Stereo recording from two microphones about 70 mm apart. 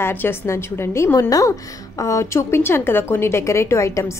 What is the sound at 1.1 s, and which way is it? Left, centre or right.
A woman's voice, left.